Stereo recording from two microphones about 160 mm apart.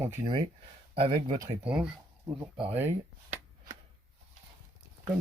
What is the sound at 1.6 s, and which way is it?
Speech, 5° right (ahead or behind).